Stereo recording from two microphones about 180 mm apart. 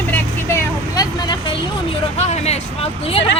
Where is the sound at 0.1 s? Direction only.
15° left (ahead or behind).